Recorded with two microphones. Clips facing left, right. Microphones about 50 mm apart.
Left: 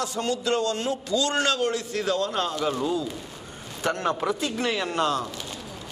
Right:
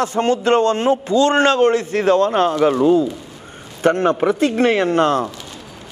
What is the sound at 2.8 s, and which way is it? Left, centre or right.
A man's voice, right.